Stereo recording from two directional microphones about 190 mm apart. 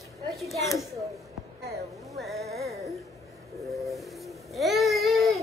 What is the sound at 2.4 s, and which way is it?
Music, 55° right (ahead or behind).